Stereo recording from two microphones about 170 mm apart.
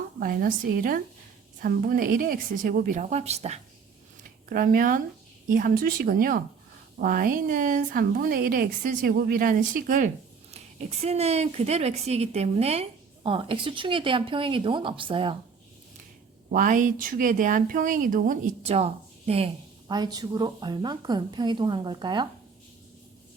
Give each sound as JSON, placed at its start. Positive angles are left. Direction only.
{"t": 0.2, "sound": "a woman's voice", "side_deg": -60}
{"t": 4.4, "sound": "a woman's voice", "side_deg": -55}
{"t": 10.5, "sound": "speech", "side_deg": -40}
{"t": 16.5, "sound": "speech", "side_deg": -50}